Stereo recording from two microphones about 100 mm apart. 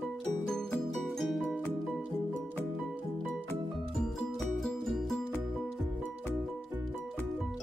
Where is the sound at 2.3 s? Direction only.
15° left (ahead or behind).